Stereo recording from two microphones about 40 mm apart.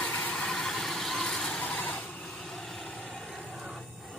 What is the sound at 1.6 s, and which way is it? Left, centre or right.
Vehicle, left.